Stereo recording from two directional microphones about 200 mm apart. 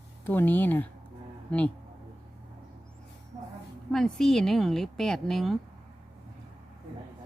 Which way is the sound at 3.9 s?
Centre (ahead or behind).